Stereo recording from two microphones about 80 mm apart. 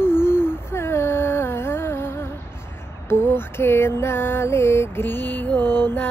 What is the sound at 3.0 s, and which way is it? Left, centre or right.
Mantra, left.